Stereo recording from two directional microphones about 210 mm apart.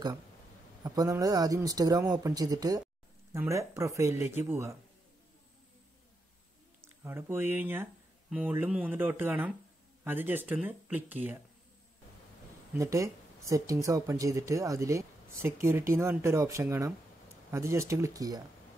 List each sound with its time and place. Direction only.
0.8 s speech: 15° right (ahead or behind)
6.8 s speech: 10° right (ahead or behind)
12.7 s speech: 15° right (ahead or behind)